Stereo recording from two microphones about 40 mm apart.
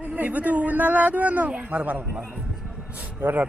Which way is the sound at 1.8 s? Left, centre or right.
Right.